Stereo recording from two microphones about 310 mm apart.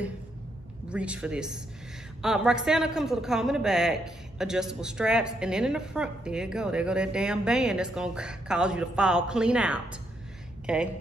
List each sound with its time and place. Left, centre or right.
0.8 s a man's voice: centre